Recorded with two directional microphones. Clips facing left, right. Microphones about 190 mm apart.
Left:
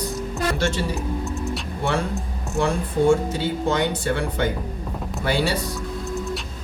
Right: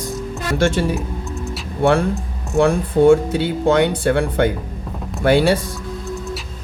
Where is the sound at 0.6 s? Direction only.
55° right (ahead or behind).